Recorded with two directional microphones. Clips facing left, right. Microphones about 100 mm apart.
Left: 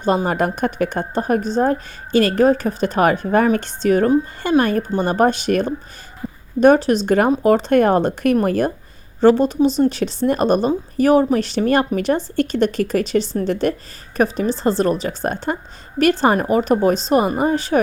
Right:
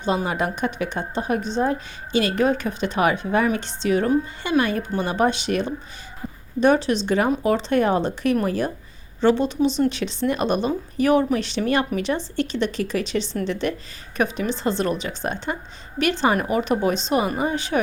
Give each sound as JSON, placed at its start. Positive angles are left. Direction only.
{"t": 0.3, "sound": "a woman's voice", "side_deg": 50}